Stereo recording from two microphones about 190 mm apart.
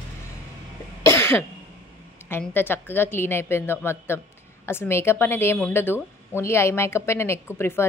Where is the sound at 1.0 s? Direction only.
15° left (ahead or behind).